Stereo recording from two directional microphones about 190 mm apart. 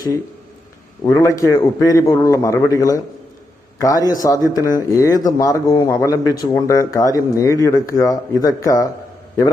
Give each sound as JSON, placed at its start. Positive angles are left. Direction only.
{"t": 1.0, "sound": "a man's voice", "side_deg": 15}